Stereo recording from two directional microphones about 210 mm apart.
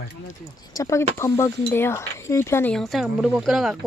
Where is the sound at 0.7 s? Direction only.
15° left (ahead or behind).